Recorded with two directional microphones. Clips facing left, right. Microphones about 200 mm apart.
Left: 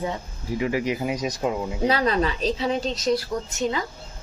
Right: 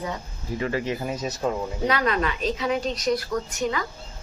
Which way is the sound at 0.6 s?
15° left (ahead or behind).